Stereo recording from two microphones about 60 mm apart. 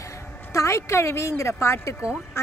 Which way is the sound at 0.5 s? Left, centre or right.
Left.